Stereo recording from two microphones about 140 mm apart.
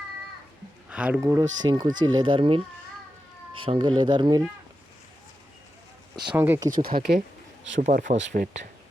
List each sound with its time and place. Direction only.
0.9 s speech: 10° right (ahead or behind)
1.6 s speech: 30° right (ahead or behind)
3.6 s speech: 35° right (ahead or behind)
6.3 s speech: 15° right (ahead or behind)
6.7 s speech: 85° right
7.8 s speech: 65° right (ahead or behind)